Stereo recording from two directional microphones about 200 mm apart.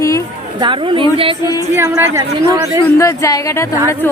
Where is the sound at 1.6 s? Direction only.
10° right (ahead or behind).